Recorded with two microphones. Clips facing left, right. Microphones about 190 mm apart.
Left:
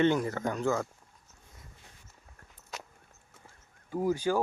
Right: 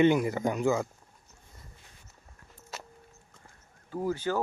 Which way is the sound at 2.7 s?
5° right (ahead or behind).